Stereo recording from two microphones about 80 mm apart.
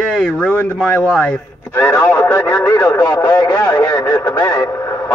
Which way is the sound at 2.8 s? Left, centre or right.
Left.